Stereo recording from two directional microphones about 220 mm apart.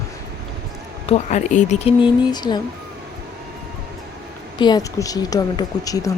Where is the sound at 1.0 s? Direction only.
30° left (ahead or behind).